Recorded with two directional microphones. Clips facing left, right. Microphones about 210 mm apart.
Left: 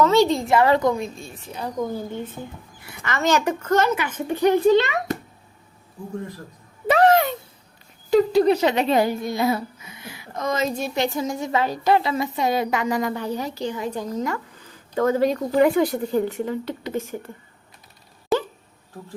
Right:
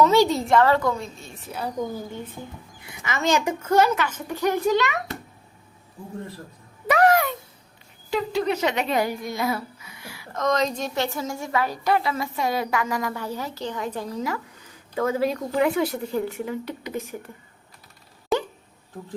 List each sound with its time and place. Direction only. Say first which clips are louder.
0.0 s a woman's voice: left 1 dB; 10° right (ahead or behind)
0.5 s a woman's voice: left 1 dB; 15° left (ahead or behind)
1.4 s speech: right 1 dB; 5° right (ahead or behind)
3.0 s speech: left 2 dB; 10° right (ahead or behind)
3.9 s a woman's voice: left 2 dB; 20° left (ahead or behind)
6.8 s a sound: left 2 dB; 30° left (ahead or behind)
8.1 s speech: left 8 dB; 40° left (ahead or behind); by 10.4 s 20° left (ahead or behind)
10.4 s a woman's voice: right 1 dB; 5° left (ahead or behind)
13.8 s speech: left 1 dB; 5° right (ahead or behind)
16.3 s speech: left 3 dB; 15° right (ahead or behind)